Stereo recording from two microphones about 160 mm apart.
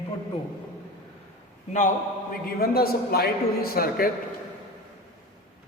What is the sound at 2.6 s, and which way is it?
A man's voice, 70° left (ahead or behind).